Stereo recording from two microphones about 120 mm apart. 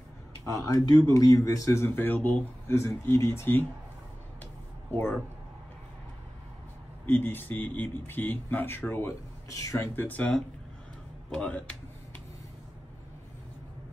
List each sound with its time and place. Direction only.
0.5 s a man's voice: 30° left (ahead or behind)
4.9 s speech: 20° left (ahead or behind)
7.1 s speech: 15° left (ahead or behind)